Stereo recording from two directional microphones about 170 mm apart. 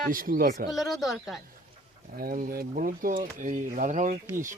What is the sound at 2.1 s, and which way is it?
Speech, 55° right (ahead or behind).